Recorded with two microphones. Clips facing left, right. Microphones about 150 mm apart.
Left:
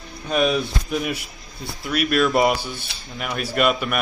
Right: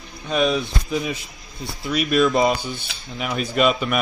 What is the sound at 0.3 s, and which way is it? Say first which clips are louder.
Speech: even; centre (ahead or behind).